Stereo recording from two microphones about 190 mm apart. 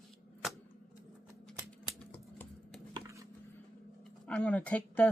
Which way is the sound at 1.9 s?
5° left (ahead or behind).